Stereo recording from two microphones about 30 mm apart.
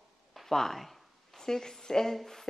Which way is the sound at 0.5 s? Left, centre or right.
Centre.